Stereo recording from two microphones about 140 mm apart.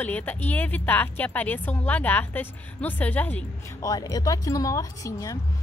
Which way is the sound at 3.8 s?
25° left (ahead or behind).